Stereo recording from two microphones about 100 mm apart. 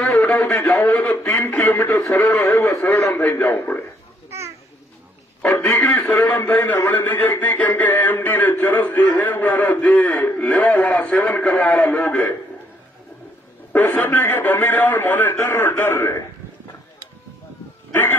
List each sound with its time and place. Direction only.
0.0 s a sound: 10° left (ahead or behind)
0.7 s a man's voice: 20° left (ahead or behind)
2.4 s a man's voice: 30° left (ahead or behind)
4.3 s children playing: 30° right (ahead or behind)
5.4 s a man's voice: 15° left (ahead or behind)
6.4 s a man's voice: 20° left (ahead or behind)
13.9 s a man's voice: 20° left (ahead or behind)